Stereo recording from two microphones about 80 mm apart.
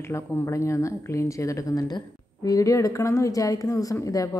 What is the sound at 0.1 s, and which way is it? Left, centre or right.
A woman's voice, left.